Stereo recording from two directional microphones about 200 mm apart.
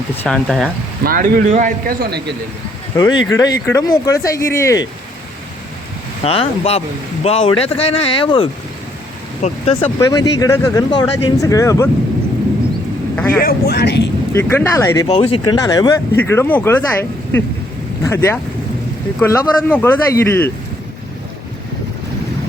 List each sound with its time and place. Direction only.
0.2 s speech: centre (ahead or behind)
1.0 s a man's voice: 45° right (ahead or behind)
2.9 s speech: 20° left (ahead or behind)
6.2 s speech: 30° left (ahead or behind)
10.0 s speech: 15° left (ahead or behind)
13.1 s speech: 10° left (ahead or behind)
13.4 s speech: 50° left (ahead or behind)
14.3 s speech: 10° left (ahead or behind)
15.0 s speech: 30° left (ahead or behind); by 20.5 s 10° left (ahead or behind)